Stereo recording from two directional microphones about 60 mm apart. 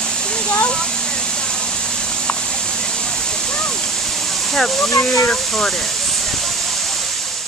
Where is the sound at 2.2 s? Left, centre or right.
Centre.